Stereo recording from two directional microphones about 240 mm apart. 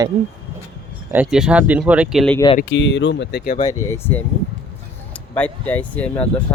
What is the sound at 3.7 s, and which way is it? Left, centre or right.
Speech, centre.